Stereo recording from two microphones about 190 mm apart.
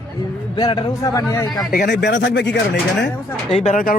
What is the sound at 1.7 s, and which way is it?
Speech, 60° left (ahead or behind).